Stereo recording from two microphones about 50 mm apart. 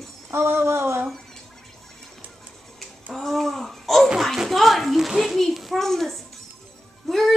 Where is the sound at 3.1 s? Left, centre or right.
Centre.